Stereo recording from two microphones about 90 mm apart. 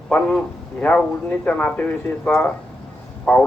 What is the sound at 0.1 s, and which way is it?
A man's voice, 10° left (ahead or behind).